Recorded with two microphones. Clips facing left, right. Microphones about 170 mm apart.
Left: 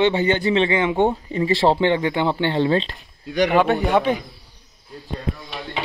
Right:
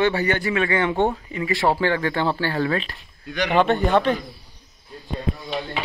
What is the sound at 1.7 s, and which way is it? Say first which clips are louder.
Speech: left 3 dB; 20° left (ahead or behind).